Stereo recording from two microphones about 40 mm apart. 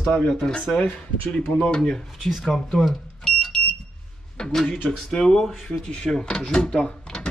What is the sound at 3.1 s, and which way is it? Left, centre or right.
Fire alarm, centre.